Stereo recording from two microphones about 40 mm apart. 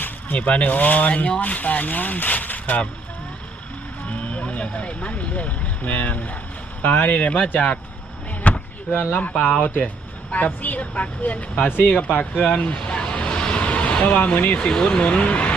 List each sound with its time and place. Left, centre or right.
0.3 s speech: left
4.1 s speech: left
8.4 s a sound: left
8.9 s speech: left
11.8 s speech: left
12.0 s speech: left
12.6 s vehicle: left
14.3 s speech: left
14.8 s speech: centre
15.0 s speech: left